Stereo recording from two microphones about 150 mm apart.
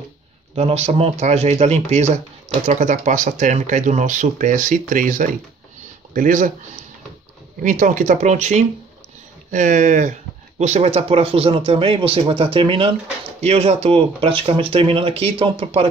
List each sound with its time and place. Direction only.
0.6 s speech: 45° right (ahead or behind); by 6.5 s 65° right (ahead or behind)
7.6 s speech: 60° right (ahead or behind)
10.6 s speech: 45° right (ahead or behind)